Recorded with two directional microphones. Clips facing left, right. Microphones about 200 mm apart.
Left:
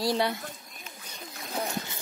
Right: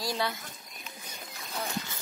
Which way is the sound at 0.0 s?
30° left (ahead or behind).